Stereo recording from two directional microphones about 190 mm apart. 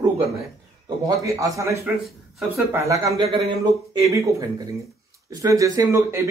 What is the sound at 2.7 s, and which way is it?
Speech, 15° right (ahead or behind).